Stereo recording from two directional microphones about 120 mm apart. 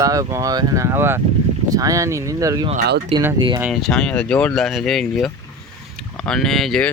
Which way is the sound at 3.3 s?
40° right (ahead or behind).